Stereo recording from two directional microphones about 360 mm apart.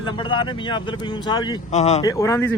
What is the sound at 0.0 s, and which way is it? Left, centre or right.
Speech, centre.